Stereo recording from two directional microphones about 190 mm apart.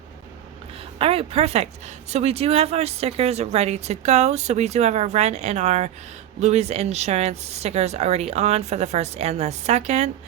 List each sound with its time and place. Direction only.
0.9 s speech: 30° right (ahead or behind)